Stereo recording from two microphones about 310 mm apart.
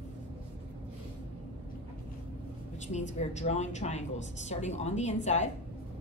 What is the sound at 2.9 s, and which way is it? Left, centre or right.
A woman's voice, left.